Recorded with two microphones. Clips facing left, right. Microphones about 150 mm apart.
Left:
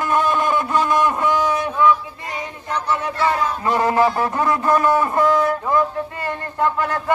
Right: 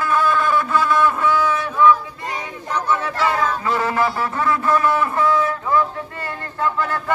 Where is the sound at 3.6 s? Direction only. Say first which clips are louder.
Left 3 dB; 15° left (ahead or behind).